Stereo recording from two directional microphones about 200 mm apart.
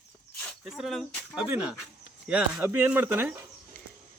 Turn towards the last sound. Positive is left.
turn(degrees=-10)  # may be behind; listen again after turning